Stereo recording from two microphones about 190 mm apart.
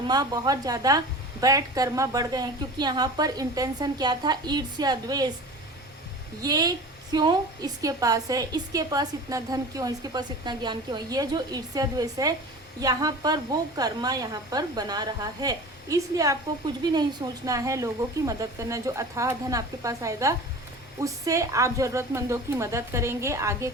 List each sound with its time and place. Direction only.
0.1 s a woman's voice: 20° right (ahead or behind)
6.4 s a woman's voice: 20° right (ahead or behind)